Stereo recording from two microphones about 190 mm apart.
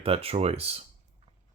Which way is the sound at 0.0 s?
30° right (ahead or behind).